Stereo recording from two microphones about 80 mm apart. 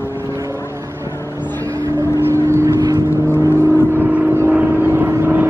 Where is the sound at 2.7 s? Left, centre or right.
Right.